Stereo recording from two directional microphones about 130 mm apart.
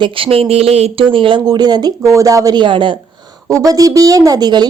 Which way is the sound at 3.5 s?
25° right (ahead or behind).